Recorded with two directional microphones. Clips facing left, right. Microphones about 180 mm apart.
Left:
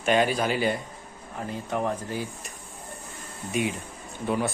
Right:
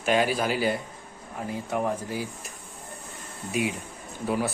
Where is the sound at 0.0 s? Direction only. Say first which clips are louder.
Left 1 dB; 5° right (ahead or behind).